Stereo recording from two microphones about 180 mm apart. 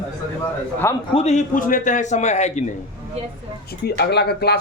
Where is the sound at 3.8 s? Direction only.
65° left (ahead or behind).